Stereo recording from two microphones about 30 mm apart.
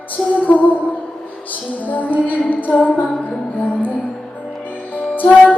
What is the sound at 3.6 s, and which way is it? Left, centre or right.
Music, left.